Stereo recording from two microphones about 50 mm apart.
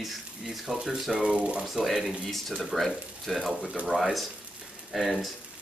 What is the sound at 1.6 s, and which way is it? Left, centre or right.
Speech, centre.